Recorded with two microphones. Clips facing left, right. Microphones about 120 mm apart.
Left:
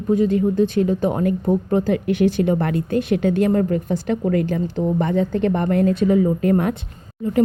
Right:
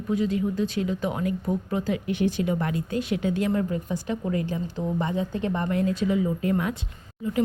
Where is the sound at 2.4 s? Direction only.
55° left (ahead or behind).